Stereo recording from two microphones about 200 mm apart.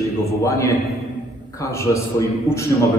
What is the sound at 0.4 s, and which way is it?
A man's voice, 15° left (ahead or behind).